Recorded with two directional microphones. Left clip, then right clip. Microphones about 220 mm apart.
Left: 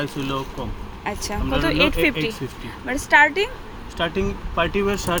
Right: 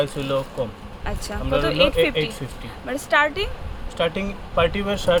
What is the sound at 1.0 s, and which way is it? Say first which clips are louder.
Speech: left 2 dB; 5° left (ahead or behind).